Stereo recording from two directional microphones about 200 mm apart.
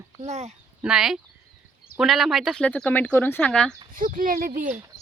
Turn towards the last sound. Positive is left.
turn(degrees=-45)  # may be behind; listen again after turning